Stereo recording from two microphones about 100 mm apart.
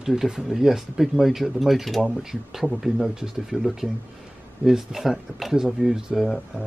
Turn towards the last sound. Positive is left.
turn(degrees=0)  # may be behind; listen again after turning